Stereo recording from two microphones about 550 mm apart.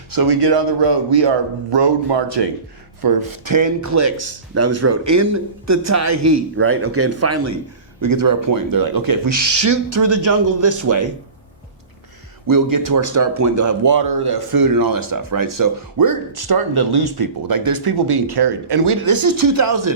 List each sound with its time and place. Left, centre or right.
0.1 s speech: right
3.0 s a man's voice: right
8.1 s speech: right
12.5 s speech: right